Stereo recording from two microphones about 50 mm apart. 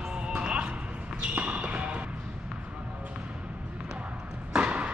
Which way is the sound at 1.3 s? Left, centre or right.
Right.